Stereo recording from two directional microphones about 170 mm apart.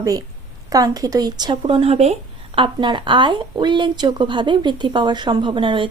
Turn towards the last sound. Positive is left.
turn(degrees=-30)  # may be behind; listen again after turning